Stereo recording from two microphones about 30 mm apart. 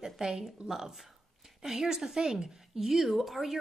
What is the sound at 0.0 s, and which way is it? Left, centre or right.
A woman's voice, centre.